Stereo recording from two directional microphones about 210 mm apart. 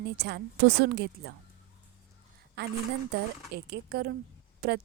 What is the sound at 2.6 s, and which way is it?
A woman's voice, 50° right (ahead or behind).